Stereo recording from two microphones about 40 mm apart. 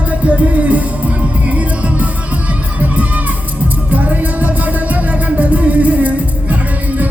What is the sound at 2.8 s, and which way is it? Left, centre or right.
Crowd, right.